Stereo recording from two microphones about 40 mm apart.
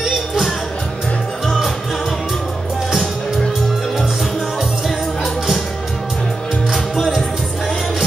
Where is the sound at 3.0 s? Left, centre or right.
Centre.